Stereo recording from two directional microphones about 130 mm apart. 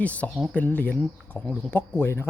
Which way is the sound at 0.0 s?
10° left (ahead or behind).